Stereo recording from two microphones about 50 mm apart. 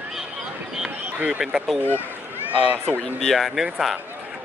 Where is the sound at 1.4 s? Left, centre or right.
Centre.